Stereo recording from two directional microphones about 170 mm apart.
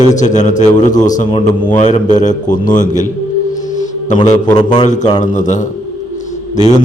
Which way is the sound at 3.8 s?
45° left (ahead or behind).